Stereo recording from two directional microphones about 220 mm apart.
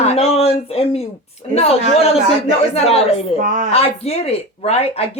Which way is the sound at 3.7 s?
30° left (ahead or behind).